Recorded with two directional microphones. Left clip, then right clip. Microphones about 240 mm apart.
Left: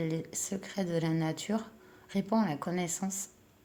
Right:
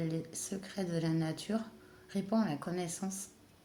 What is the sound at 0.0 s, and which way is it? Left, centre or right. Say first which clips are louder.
Speech: left 4 dB; left.